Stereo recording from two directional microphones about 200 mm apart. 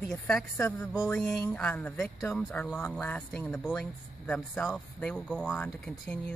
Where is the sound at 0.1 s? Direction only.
5° left (ahead or behind).